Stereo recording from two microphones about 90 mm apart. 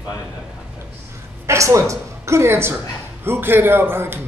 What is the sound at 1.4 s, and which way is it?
A woman's voice, 35° right (ahead or behind).